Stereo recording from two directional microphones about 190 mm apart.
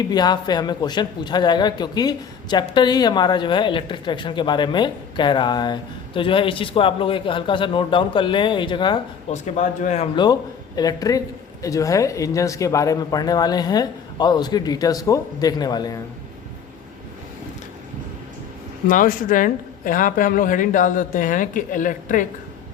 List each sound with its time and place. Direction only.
0.0 s speech: 20° left (ahead or behind)
9.3 s speech: 40° left (ahead or behind)
10.8 s speech: 20° left (ahead or behind)
18.9 s a woman's voice: 45° left (ahead or behind)